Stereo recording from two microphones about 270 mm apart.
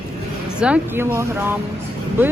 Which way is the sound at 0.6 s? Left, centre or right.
Centre.